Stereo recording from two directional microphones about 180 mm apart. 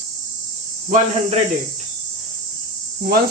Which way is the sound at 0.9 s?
40° right (ahead or behind).